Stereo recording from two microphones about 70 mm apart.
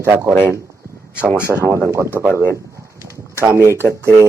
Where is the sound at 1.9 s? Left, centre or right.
Right.